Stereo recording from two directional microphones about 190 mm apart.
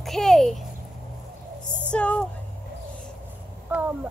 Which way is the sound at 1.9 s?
5° left (ahead or behind).